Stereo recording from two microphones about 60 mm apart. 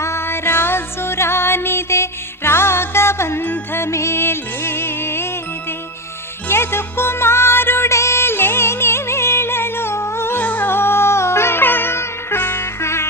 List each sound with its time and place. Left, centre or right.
0.0 s music: left
3.4 s music: left
3.8 s music: left
6.5 s music: left
10.4 s music: left
12.8 s music: left